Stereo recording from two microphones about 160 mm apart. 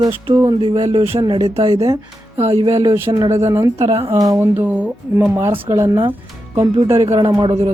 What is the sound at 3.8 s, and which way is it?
Speech, 40° right (ahead or behind).